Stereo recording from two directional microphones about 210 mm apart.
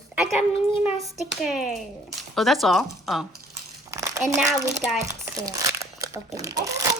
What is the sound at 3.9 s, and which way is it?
Crumpling, 15° right (ahead or behind).